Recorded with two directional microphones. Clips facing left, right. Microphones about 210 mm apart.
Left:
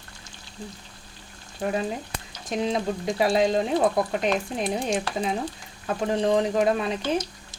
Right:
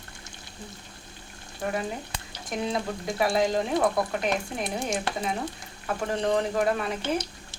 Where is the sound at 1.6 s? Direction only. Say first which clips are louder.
Left 3 dB; 25° left (ahead or behind).